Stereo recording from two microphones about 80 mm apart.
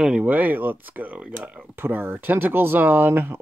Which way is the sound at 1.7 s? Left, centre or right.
Right.